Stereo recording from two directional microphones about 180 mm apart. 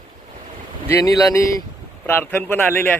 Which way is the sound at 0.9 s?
20° left (ahead or behind).